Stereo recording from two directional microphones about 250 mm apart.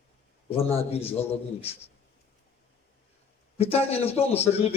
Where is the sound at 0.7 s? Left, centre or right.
Left.